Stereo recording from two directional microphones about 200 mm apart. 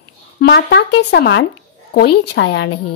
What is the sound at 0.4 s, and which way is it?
A woman's voice, 55° left (ahead or behind).